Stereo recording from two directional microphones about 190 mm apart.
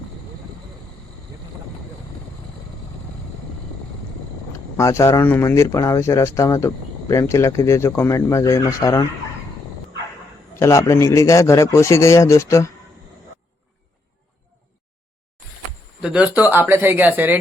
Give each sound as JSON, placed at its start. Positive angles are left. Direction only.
{"t": 4.8, "sound": "speech", "side_deg": 15}
{"t": 10.6, "sound": "speech", "side_deg": 15}
{"t": 16.0, "sound": "speech", "side_deg": -5}